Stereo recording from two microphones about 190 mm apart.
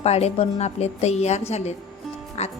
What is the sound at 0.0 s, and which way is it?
A woman's voice, 35° left (ahead or behind).